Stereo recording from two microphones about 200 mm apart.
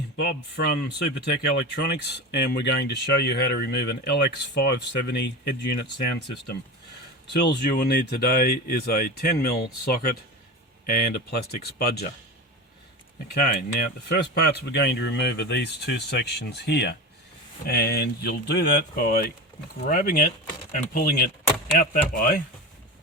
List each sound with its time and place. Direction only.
0.5 s speech: 55° left (ahead or behind)
7.6 s speech: 50° left (ahead or behind)
13.3 s speech: 50° left (ahead or behind)